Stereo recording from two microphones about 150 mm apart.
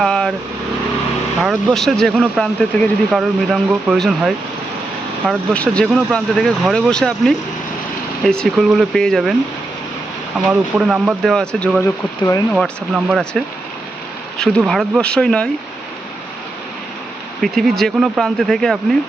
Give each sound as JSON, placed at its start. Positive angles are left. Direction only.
{"t": 0.0, "sound": "vehicle", "side_deg": 5}
{"t": 1.4, "sound": "speech", "side_deg": 0}
{"t": 10.3, "sound": "speech", "side_deg": -5}
{"t": 17.4, "sound": "speech", "side_deg": 0}